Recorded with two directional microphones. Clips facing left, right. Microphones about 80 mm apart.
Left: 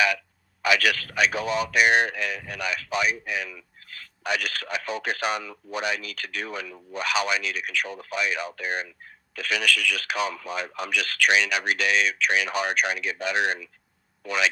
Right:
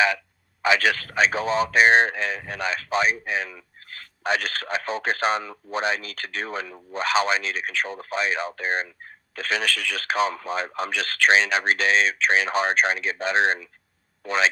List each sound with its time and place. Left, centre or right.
0.6 s a man's voice: right